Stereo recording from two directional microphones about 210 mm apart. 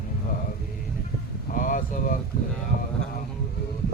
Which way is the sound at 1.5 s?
40° left (ahead or behind).